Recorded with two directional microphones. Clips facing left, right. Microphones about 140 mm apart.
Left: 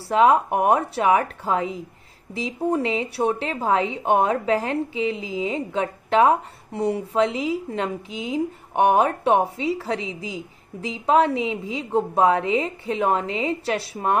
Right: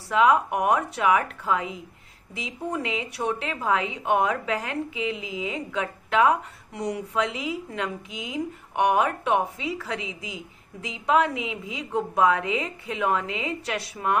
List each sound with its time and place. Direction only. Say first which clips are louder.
0.1 s a woman's voice: left 3 dB; 35° left (ahead or behind)